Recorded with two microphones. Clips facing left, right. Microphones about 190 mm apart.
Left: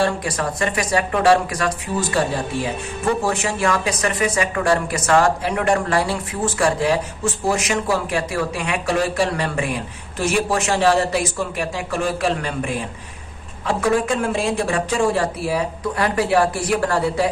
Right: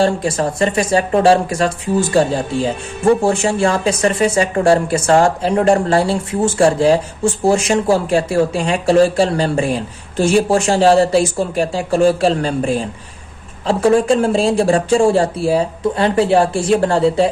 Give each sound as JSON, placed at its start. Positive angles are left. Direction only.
{"t": 0.0, "sound": "speech", "side_deg": -25}